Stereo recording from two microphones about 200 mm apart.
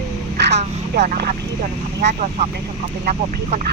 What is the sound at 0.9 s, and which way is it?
Speech, 45° right (ahead or behind).